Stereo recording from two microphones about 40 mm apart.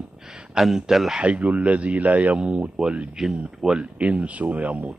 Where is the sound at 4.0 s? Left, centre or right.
Right.